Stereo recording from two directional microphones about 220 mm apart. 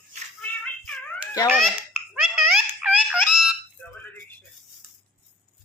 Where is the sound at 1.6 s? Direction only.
Centre (ahead or behind).